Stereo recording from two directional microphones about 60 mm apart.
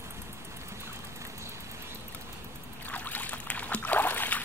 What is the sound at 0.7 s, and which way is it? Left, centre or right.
Vehicle, right.